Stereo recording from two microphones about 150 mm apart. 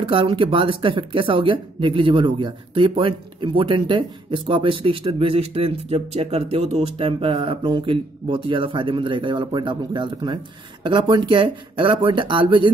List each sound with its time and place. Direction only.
0.0 s speech: 35° right (ahead or behind)